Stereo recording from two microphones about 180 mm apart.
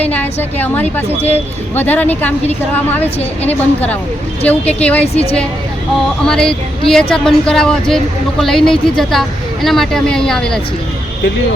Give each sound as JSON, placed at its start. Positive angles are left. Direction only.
{"t": 0.0, "sound": "a woman's voice", "side_deg": 10}
{"t": 5.1, "sound": "a woman's voice", "side_deg": 35}
{"t": 6.2, "sound": "speech", "side_deg": 5}